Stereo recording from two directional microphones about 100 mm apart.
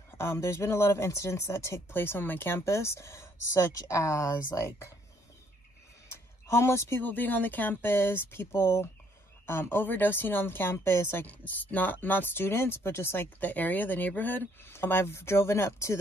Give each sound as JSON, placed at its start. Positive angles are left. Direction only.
{"t": 0.2, "sound": "speech", "side_deg": 30}
{"t": 6.0, "sound": "speech", "side_deg": 30}